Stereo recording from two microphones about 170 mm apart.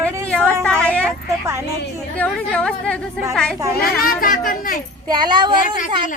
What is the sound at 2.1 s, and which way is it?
Speech, 10° left (ahead or behind).